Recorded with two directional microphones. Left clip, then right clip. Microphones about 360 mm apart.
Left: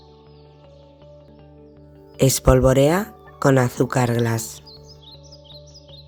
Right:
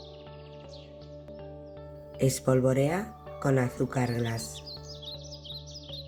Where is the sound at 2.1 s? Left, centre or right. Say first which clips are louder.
Left 10 dB; left.